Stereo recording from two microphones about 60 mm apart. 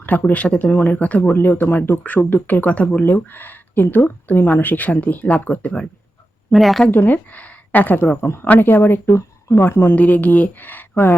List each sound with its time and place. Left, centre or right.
0.0 s speech: left
1.2 s speech: left
6.5 s speech: centre
6.9 s speech: left
8.9 s speech: left
9.9 s speech: left